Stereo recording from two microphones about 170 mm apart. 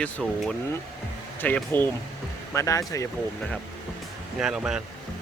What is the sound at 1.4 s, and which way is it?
Speech, 10° left (ahead or behind).